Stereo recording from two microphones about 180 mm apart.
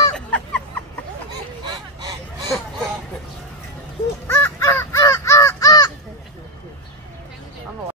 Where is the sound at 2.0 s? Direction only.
20° right (ahead or behind).